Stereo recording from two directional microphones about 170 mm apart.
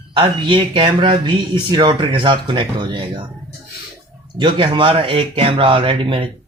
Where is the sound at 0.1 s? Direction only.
30° right (ahead or behind).